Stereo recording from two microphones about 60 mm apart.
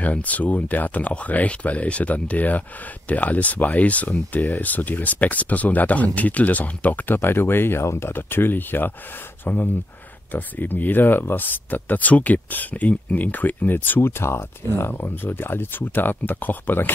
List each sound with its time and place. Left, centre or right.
0.0 s speech: left